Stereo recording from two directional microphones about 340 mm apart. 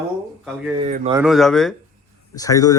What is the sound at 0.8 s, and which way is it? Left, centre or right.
Speech, centre.